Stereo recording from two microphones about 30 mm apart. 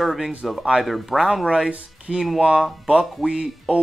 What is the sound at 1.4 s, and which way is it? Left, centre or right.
Speech, right.